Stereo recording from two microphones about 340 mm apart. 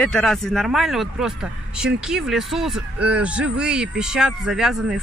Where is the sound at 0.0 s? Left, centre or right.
Centre.